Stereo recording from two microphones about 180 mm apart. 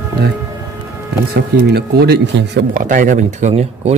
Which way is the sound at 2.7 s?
45° right (ahead or behind).